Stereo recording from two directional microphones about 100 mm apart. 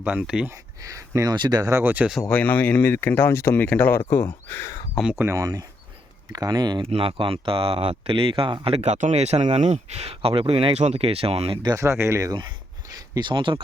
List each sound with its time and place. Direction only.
0.0 s speech: 15° right (ahead or behind)
0.8 s speech: 35° right (ahead or behind)
1.8 s speech: 20° right (ahead or behind)
2.3 s speech: 15° left (ahead or behind)
5.1 s speech: 30° right (ahead or behind)
6.9 s speech: 65° right (ahead or behind)
8.6 s speech: 85° right
11.8 s speech: 30° right (ahead or behind)
13.1 s speech: 50° right (ahead or behind)